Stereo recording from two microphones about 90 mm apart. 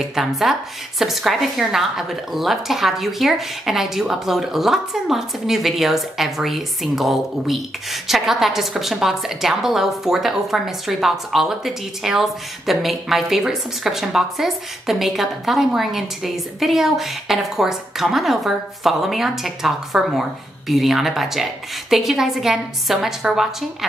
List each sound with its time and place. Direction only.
0.0 s a woman's voice: 5° right (ahead or behind)